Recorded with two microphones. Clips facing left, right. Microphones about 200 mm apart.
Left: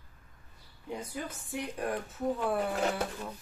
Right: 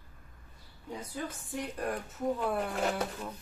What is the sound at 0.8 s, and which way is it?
A woman's voice, 10° left (ahead or behind).